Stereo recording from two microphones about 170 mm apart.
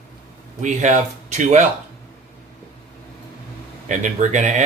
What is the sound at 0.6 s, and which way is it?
Speech, 45° right (ahead or behind).